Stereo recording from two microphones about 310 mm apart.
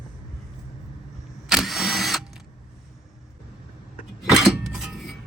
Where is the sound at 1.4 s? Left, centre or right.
Centre.